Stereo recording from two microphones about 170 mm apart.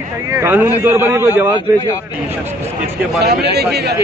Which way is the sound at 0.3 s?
15° right (ahead or behind).